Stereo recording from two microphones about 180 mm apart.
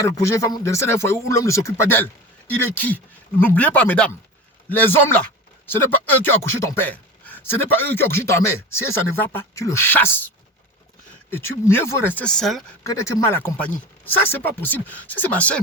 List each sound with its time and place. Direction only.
0.2 s speech: 15° left (ahead or behind); by 12.6 s centre (ahead or behind)
12.8 s speech: 15° left (ahead or behind)